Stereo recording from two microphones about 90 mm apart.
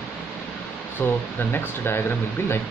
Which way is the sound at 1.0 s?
25° left (ahead or behind).